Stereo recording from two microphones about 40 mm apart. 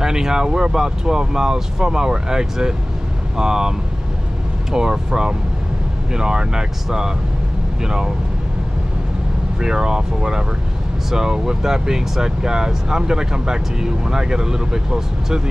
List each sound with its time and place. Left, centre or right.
0.0 s speech: centre
4.7 s speech: centre
9.6 s speech: centre